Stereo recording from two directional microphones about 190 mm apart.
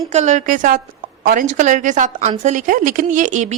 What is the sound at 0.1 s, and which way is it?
Speech, 40° right (ahead or behind).